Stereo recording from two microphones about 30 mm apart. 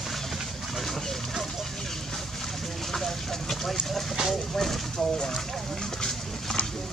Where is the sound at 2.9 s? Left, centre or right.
Centre.